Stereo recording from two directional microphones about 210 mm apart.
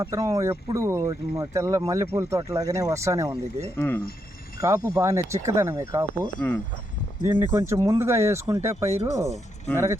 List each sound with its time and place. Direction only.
0.0 s speech: 15° right (ahead or behind)
3.8 s speech: 10° left (ahead or behind)
4.6 s speech: 15° right (ahead or behind)
7.2 s speech: 15° right (ahead or behind)